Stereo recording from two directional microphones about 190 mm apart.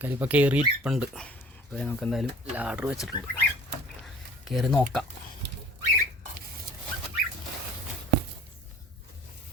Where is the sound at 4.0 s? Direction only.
Centre (ahead or behind).